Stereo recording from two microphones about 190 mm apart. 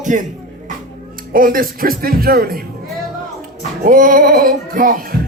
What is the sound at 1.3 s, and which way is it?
Speech, 50° right (ahead or behind).